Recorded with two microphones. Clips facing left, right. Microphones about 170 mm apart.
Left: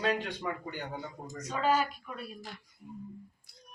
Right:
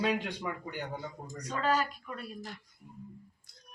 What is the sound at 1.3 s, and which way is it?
Speech, 5° left (ahead or behind).